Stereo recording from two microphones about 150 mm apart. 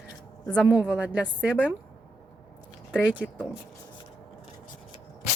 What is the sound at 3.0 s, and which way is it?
Speech, 10° right (ahead or behind).